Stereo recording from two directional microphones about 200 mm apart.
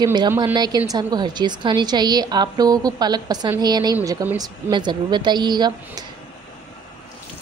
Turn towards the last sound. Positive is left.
turn(degrees=-20)  # may be behind; listen again after turning